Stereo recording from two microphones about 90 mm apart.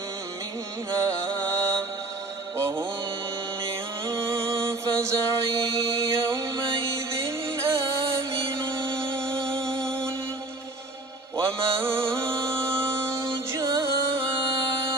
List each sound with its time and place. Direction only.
1.0 s music: 35° right (ahead or behind)
2.6 s mantra: 30° right (ahead or behind)
3.6 s music: 30° right (ahead or behind)
11.3 s mantra: 30° right (ahead or behind)
12.4 s music: 10° left (ahead or behind)
12.6 s music: 30° right (ahead or behind)